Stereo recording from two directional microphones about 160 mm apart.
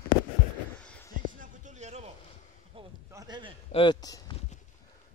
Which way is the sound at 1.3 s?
55° right (ahead or behind).